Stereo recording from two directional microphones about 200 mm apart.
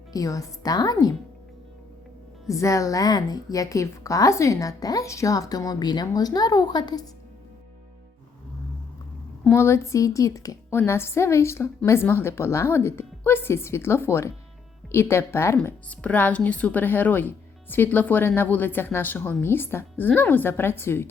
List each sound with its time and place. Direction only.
0.1 s a woman's voice: 15° left (ahead or behind)
2.5 s a woman's voice: 15° left (ahead or behind)
9.4 s a woman's voice: 10° left (ahead or behind)